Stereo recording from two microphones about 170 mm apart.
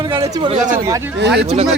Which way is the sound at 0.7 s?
15° right (ahead or behind).